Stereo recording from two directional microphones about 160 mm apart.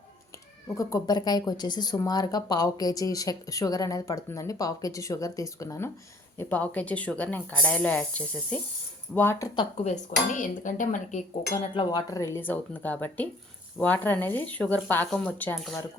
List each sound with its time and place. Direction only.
0.8 s speech: 20° left (ahead or behind)
9.8 s speech: 50° left (ahead or behind)
11.7 s speech: 30° left (ahead or behind); by 15.5 s 10° left (ahead or behind)